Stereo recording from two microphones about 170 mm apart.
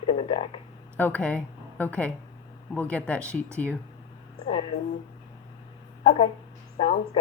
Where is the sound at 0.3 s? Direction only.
30° left (ahead or behind).